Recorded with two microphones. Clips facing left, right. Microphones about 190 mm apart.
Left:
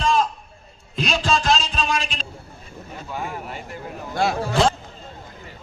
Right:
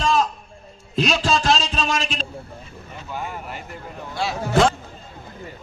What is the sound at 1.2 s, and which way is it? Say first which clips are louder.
Music: right 1 dB; 35° right (ahead or behind).